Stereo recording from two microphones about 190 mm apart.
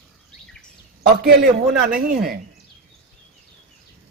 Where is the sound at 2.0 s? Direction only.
50° right (ahead or behind).